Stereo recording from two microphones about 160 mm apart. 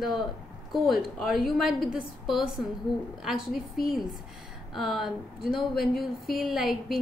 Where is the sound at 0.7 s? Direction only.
Centre (ahead or behind).